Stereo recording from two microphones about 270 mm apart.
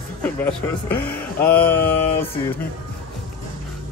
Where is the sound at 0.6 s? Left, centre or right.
Centre.